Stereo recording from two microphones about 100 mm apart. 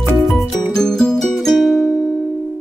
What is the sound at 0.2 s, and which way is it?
Music, centre (ahead or behind).